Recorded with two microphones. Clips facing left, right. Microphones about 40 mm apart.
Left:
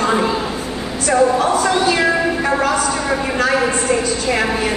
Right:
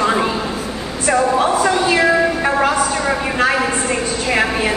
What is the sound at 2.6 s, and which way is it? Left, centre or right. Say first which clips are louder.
A woman's voice: right 1 dB; centre.